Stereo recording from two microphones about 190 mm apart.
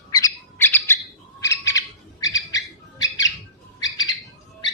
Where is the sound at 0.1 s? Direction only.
20° left (ahead or behind).